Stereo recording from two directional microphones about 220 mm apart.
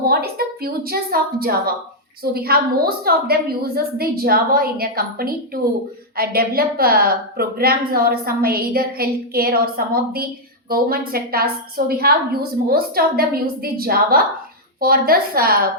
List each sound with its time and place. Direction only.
0.1 s a woman's voice: 45° right (ahead or behind)